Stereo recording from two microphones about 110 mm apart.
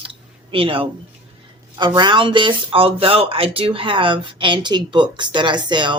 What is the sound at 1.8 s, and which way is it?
A woman's voice, 45° right (ahead or behind).